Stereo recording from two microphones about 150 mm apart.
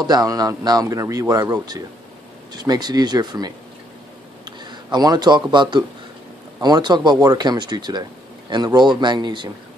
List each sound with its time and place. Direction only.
0.0 s speech: 25° right (ahead or behind)
4.8 s speech: 25° right (ahead or behind)